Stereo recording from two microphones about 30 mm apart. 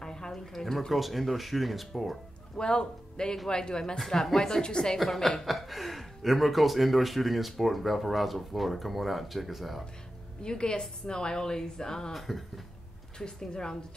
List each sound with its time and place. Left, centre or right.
0.0 s a sound: left
0.7 s speech: centre
2.5 s a man's voice: left
4.9 s speech: centre
10.4 s a woman's voice: left
12.1 s speech: centre
13.2 s a woman's voice: left